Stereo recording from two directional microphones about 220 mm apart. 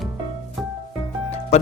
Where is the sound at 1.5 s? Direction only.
30° left (ahead or behind).